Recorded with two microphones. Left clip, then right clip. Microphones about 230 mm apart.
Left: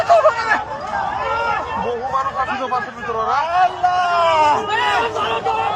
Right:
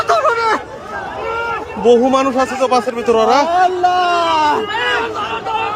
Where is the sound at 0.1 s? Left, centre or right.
Right.